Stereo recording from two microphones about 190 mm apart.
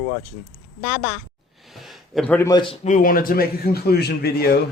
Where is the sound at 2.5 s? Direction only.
25° left (ahead or behind).